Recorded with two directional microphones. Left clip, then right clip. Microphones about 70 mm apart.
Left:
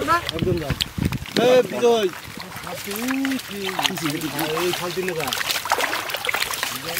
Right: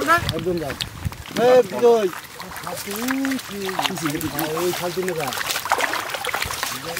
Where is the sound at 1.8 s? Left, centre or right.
Centre.